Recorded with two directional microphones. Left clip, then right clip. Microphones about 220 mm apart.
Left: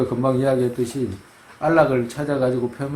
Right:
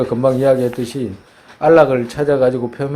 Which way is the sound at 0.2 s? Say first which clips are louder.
Right 7 dB; 35° right (ahead or behind).